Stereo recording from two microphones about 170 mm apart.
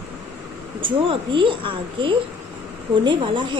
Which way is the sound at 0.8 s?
30° right (ahead or behind).